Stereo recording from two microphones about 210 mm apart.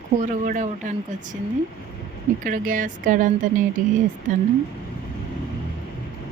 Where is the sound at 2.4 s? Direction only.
40° right (ahead or behind).